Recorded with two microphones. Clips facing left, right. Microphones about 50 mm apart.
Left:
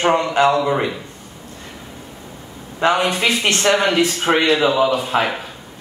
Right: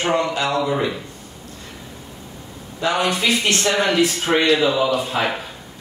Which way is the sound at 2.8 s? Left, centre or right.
Left.